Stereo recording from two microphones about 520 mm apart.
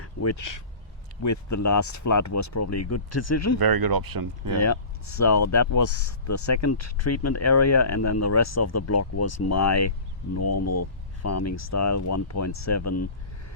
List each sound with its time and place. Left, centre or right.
0.0 s speech: left
3.6 s speech: right
4.6 s speech: left